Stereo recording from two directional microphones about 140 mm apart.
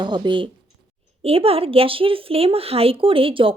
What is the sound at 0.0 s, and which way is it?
Speech, 30° right (ahead or behind).